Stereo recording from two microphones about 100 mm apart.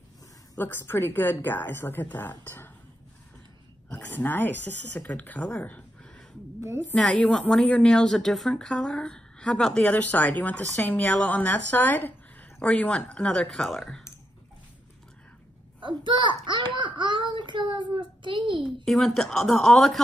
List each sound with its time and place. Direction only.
0.6 s a woman's voice: 20° left (ahead or behind)
3.9 s a woman's voice: 20° left (ahead or behind)
5.6 s a sound: 15° left (ahead or behind)
7.0 s a woman's voice: 5° left (ahead or behind)
15.8 s a child's voice: 50° right (ahead or behind)
18.9 s speech: 5° left (ahead or behind)